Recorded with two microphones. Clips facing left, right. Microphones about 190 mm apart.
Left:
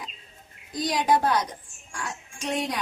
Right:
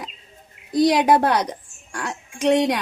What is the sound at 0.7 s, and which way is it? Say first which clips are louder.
A woman's voice: right 8 dB; 70° right (ahead or behind).